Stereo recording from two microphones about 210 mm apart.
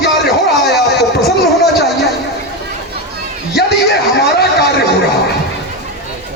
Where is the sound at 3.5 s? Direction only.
50° left (ahead or behind).